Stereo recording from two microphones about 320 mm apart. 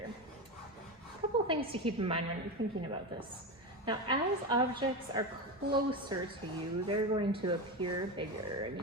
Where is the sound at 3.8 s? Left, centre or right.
Centre.